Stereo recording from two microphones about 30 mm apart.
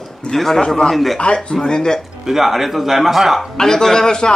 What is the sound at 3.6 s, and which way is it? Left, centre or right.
Speech, centre.